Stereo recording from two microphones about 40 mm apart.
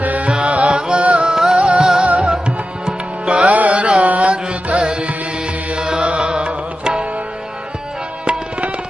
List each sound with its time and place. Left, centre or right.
0.0 s music: right
1.3 s music: centre
1.5 s music: right
8.2 s tabla: right